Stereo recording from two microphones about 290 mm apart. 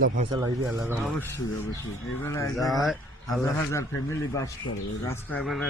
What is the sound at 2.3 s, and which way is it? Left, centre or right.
Speech, centre.